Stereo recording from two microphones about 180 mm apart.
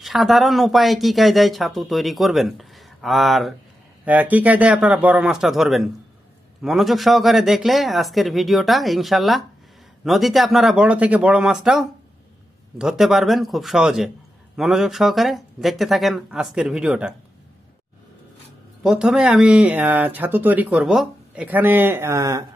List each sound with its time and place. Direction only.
0.0 s speech: centre (ahead or behind)
18.8 s speech: 5° right (ahead or behind)